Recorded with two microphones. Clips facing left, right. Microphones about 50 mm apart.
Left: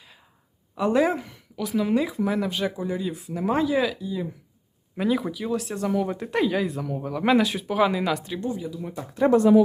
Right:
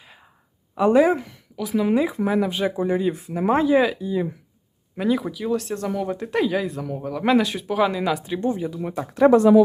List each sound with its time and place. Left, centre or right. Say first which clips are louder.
0.9 s speech: right 4 dB; centre
2.2 s speech: right 4 dB; centre
2.7 s speech: right 7 dB; right
4.9 s speech: right 2 dB; centre
8.4 s speech: right 5 dB; right
8.8 s speech: right 6 dB; right